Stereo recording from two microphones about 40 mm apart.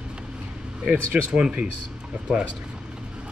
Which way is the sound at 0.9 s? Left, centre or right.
Right.